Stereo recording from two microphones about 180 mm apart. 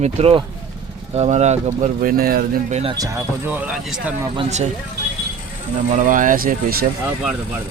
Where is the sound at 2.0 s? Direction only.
55° right (ahead or behind).